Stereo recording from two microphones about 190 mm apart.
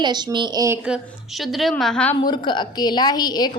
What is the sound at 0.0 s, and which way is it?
Speech, 20° right (ahead or behind).